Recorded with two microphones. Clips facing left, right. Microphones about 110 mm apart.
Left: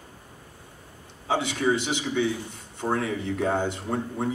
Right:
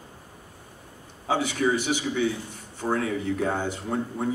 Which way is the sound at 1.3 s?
25° left (ahead or behind).